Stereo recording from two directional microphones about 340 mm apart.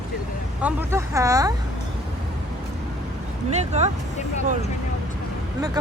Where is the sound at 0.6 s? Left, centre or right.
Centre.